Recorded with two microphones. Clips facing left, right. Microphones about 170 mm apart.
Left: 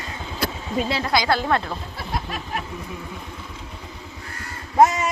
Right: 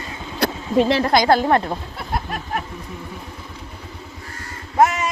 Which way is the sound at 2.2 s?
50° right (ahead or behind).